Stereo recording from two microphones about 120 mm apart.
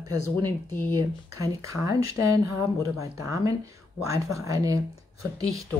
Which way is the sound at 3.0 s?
25° right (ahead or behind).